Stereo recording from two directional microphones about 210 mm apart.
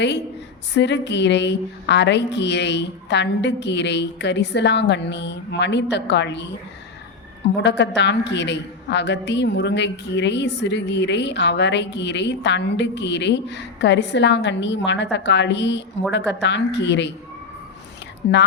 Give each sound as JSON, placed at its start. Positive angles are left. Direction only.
{"t": 0.7, "sound": "a woman's voice", "side_deg": 55}
{"t": 18.2, "sound": "speech", "side_deg": 50}